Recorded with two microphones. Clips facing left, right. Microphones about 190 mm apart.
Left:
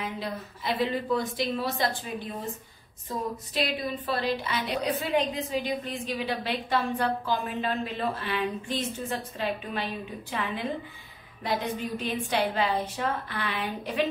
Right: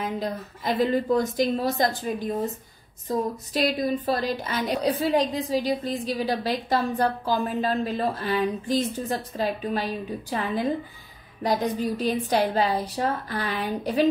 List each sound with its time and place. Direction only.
0.0 s a woman's voice: 45° right (ahead or behind)